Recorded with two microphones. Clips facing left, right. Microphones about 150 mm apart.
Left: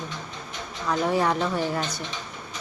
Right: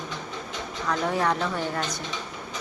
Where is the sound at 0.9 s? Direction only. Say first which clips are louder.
Left 2 dB; 5° left (ahead or behind).